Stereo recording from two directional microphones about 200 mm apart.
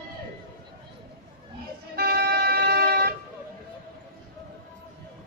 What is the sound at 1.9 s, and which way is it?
Music, 50° right (ahead or behind).